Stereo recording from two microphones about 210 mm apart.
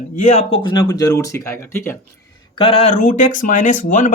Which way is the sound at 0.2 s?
35° left (ahead or behind).